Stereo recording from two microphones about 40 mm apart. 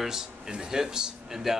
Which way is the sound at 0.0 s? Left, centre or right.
Centre.